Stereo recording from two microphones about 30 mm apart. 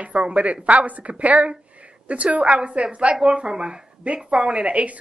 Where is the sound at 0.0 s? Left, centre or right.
Right.